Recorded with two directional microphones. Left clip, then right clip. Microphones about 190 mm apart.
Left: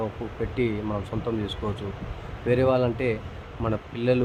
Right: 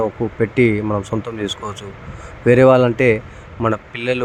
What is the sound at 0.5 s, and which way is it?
Speech, 30° right (ahead or behind).